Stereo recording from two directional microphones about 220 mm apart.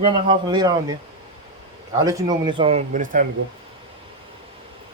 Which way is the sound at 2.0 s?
15° right (ahead or behind).